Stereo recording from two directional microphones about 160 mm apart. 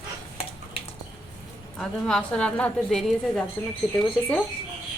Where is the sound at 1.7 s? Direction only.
5° left (ahead or behind).